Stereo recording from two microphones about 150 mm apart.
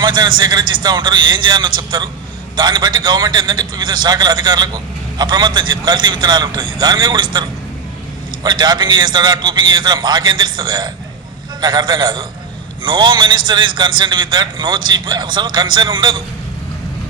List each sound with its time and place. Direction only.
0.0 s a man's voice: 30° right (ahead or behind)
8.4 s a man's voice: 30° right (ahead or behind)